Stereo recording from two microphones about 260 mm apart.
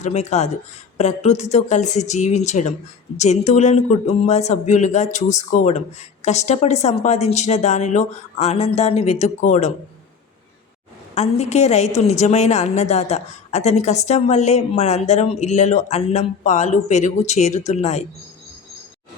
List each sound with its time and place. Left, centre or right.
0.0 s a woman's voice: left
11.1 s a woman's voice: left